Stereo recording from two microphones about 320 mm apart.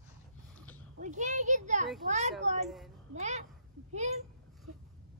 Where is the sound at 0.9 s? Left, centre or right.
Right.